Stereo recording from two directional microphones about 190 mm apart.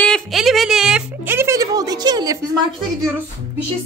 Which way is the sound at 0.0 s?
Centre (ahead or behind).